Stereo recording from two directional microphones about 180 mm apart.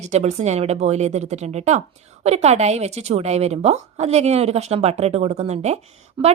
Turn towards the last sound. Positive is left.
turn(degrees=-25)  # may be behind; listen again after turning